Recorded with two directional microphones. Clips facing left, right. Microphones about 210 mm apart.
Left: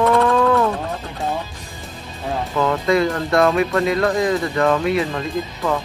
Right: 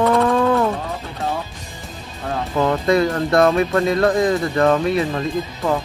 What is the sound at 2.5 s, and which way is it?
Speech, 30° right (ahead or behind).